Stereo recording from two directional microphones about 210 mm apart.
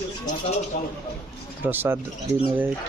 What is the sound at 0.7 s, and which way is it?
Speech, 35° left (ahead or behind).